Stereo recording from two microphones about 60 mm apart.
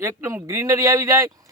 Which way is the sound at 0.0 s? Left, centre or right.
Right.